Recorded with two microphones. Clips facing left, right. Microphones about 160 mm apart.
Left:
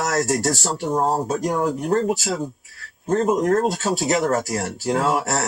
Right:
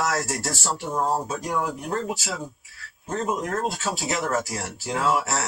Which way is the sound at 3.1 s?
40° left (ahead or behind).